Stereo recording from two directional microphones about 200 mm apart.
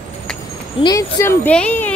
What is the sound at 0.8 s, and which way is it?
Speech, 15° left (ahead or behind).